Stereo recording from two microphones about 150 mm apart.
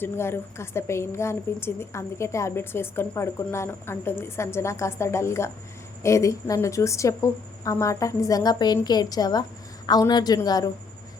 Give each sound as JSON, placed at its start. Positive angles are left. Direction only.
{"t": 0.0, "sound": "a woman's voice", "side_deg": 15}